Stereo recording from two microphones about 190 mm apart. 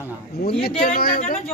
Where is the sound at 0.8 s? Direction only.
50° left (ahead or behind).